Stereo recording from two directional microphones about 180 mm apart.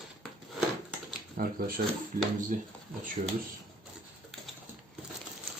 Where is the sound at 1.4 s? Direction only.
55° right (ahead or behind).